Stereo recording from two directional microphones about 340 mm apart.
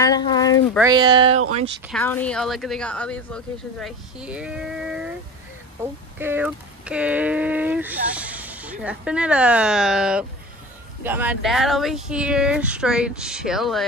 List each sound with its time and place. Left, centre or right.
0.0 s speech: centre
0.7 s speech: centre
1.9 s speech: centre
6.1 s speech: centre